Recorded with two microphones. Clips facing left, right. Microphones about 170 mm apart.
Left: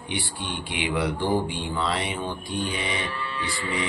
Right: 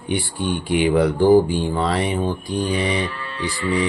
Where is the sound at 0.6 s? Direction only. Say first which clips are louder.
Right 10 dB; 45° right (ahead or behind).